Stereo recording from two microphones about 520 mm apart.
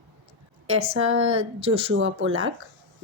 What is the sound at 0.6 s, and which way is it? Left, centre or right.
Speech, right.